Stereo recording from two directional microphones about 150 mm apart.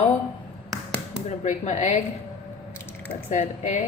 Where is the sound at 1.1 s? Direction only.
50° left (ahead or behind).